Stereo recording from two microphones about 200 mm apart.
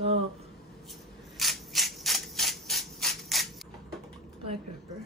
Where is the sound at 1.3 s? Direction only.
Centre (ahead or behind).